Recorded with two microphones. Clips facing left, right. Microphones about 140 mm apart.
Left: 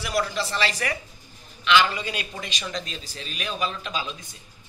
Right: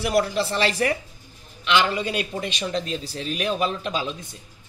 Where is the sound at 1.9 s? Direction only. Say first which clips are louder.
Right 6 dB; 50° right (ahead or behind).